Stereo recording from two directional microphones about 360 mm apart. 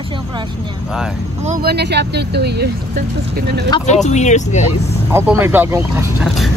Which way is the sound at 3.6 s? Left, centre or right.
Centre.